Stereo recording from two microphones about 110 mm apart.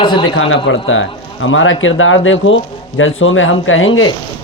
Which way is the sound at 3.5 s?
50° left (ahead or behind).